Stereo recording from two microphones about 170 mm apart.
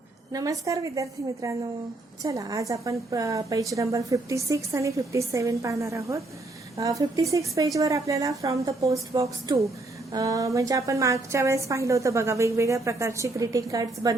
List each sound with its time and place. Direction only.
0.3 s a woman's voice: 20° right (ahead or behind)